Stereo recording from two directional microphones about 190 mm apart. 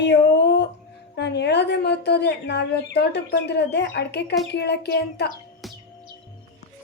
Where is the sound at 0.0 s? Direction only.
65° left (ahead or behind).